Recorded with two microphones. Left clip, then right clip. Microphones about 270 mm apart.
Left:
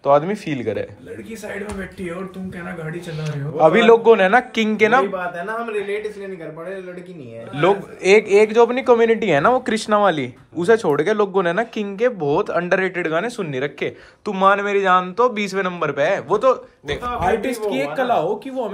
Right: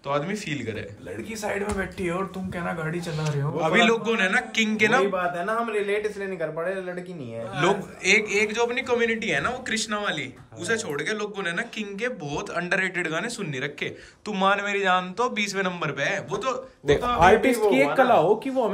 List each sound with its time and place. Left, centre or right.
0.0 s speech: centre
3.2 s speech: centre
7.5 s speech: centre
16.8 s speech: right
17.4 s speech: centre